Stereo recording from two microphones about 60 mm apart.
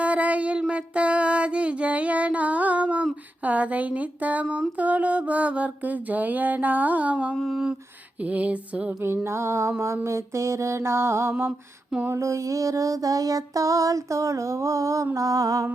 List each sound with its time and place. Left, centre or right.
0.0 s a sound: right
0.7 s music: centre
3.4 s mantra: right
7.5 s a sound: centre
8.2 s mantra: right
9.2 s mantra: right
12.1 s child singing: right